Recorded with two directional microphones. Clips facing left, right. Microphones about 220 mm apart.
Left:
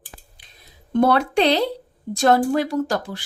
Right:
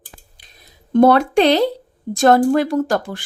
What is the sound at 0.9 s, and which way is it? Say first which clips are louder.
A woman's voice: right 5 dB; 45° right (ahead or behind).